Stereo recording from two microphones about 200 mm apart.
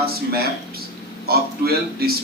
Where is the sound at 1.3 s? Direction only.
50° right (ahead or behind).